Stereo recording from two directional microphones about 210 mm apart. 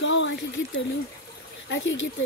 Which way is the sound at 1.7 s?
60° left (ahead or behind).